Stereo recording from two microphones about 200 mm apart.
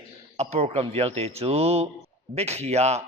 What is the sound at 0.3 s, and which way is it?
A man's voice, 30° right (ahead or behind).